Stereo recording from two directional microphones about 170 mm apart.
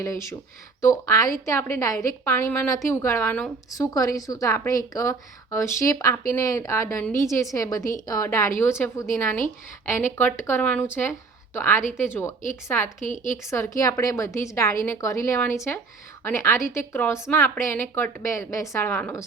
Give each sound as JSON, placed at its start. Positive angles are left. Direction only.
{"t": 0.0, "sound": "a woman's voice", "side_deg": 15}
{"t": 3.7, "sound": "a woman's voice", "side_deg": 20}
{"t": 13.1, "sound": "speech", "side_deg": 45}
{"t": 13.5, "sound": "a woman's voice", "side_deg": 15}